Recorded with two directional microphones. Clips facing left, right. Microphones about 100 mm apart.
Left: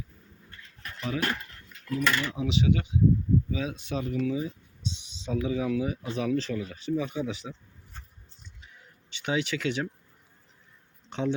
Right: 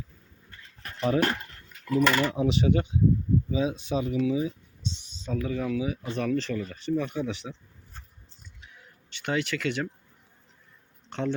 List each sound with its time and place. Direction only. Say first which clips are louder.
0.8 s a sound: right 7 dB; 40° right (ahead or behind)
2.0 s speech: right 5 dB; 35° right (ahead or behind)
2.3 s speech: right 2 dB; 45° right (ahead or behind)
3.5 s speech: right 5 dB; 25° right (ahead or behind)
5.3 s speech: left 1 dB; 10° left (ahead or behind)
8.7 s a sound: even; centre (ahead or behind)
11.1 s speech: left 1 dB; 10° left (ahead or behind)